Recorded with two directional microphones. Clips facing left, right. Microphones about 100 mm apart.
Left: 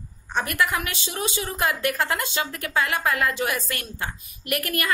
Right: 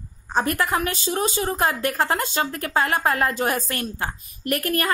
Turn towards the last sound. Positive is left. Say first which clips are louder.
# right 4 dB
turn(degrees=-35)  # may be behind; listen again after turning